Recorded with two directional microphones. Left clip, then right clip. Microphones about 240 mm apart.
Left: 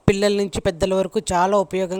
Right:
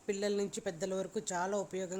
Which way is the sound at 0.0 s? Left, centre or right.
Left.